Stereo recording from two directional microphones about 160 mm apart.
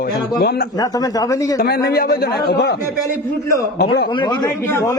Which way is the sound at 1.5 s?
70° left (ahead or behind).